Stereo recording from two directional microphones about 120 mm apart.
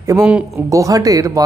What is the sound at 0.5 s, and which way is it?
Speech, 25° right (ahead or behind).